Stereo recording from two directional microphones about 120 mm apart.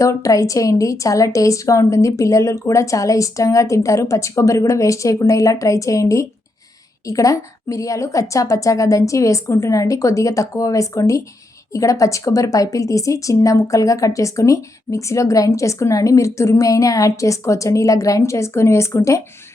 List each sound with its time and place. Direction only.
0.0 s a woman's voice: 25° left (ahead or behind)